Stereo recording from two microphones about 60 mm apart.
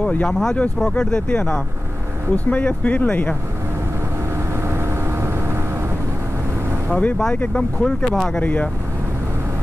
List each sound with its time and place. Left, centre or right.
0.0 s speech: centre
0.3 s speech: centre; by 3.3 s left
4.6 s vehicle: right
6.9 s speech: left
7.5 s speech: centre
8.4 s speech: left